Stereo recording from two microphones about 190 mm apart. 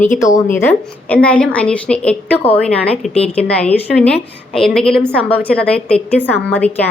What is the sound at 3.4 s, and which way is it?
A woman's voice, 5° left (ahead or behind).